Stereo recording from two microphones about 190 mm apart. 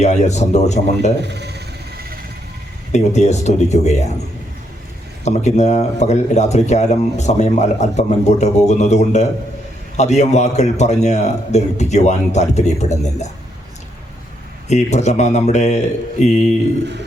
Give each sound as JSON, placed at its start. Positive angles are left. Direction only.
{"t": 0.0, "sound": "a man's voice", "side_deg": 35}
{"t": 1.2, "sound": "speech", "side_deg": -60}
{"t": 2.9, "sound": "a man's voice", "side_deg": 35}
{"t": 5.2, "sound": "a man's voice", "side_deg": 35}
{"t": 14.7, "sound": "a man's voice", "side_deg": 35}